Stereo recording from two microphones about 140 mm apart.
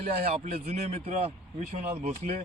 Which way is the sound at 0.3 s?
50° right (ahead or behind).